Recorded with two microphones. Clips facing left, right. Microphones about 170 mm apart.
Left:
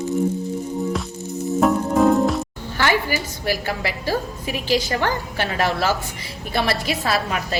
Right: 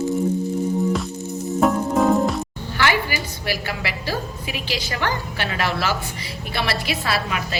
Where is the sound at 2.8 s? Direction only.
45° left (ahead or behind).